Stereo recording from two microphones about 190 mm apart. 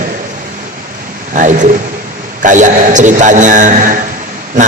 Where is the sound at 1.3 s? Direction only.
40° right (ahead or behind).